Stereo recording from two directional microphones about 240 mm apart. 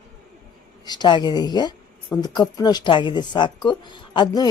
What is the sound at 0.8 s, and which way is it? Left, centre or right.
A woman's voice, centre.